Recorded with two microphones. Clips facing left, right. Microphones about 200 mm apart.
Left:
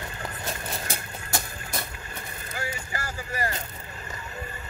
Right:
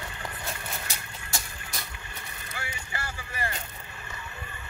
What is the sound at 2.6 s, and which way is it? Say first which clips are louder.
Vehicle: left 5 dB; 40° left (ahead or behind).